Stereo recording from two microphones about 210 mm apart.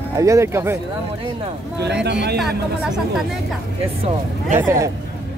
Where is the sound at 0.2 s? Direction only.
15° right (ahead or behind).